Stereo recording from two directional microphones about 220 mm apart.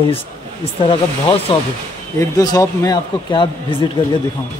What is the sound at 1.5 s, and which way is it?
A man's voice, 25° left (ahead or behind).